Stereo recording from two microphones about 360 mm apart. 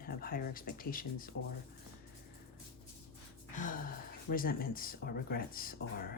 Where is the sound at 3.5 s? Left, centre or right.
Left.